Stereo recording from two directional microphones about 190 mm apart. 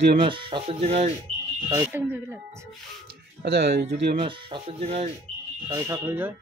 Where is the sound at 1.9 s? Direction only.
10° right (ahead or behind).